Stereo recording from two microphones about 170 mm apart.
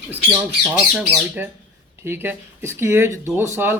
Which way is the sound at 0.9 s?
Centre (ahead or behind).